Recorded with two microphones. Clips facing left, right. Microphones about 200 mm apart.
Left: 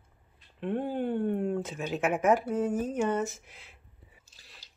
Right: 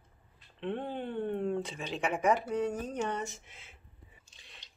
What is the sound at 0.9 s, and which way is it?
Speech, 50° left (ahead or behind).